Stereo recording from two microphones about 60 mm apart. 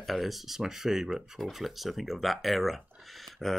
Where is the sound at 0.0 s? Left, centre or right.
Centre.